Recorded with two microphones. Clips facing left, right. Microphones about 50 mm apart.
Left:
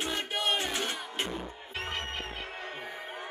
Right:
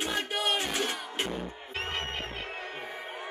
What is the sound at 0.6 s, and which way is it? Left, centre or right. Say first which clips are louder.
Battle cry: right 1 dB; centre.